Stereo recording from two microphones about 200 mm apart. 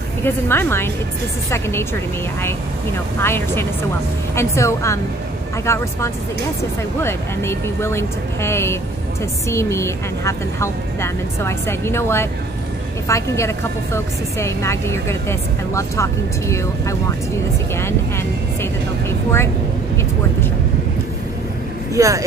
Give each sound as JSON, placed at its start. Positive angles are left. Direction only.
{"t": 0.2, "sound": "a woman's voice", "side_deg": 10}
{"t": 3.2, "sound": "a woman's voice", "side_deg": 10}
{"t": 21.9, "sound": "speech", "side_deg": -15}